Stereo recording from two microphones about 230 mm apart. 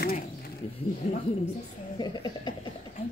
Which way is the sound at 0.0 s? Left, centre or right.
Left.